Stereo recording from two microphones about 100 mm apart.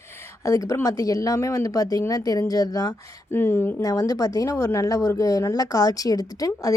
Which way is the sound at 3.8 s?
35° left (ahead or behind).